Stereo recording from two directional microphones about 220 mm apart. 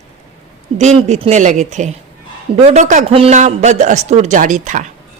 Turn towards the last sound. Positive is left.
turn(degrees=-35)  # may be behind; listen again after turning